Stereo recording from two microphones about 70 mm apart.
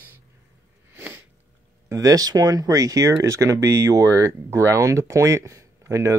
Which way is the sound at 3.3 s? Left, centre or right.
Right.